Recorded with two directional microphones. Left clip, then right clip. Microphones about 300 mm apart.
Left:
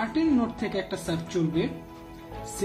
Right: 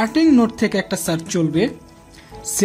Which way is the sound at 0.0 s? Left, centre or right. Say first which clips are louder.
Right 10 dB; right.